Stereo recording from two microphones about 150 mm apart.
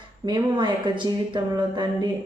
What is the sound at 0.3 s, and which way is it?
Speech, 30° right (ahead or behind).